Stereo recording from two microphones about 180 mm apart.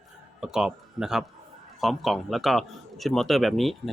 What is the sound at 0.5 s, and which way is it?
A man's voice, 5° right (ahead or behind).